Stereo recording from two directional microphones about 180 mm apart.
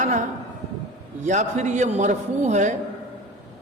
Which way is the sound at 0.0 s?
45° right (ahead or behind).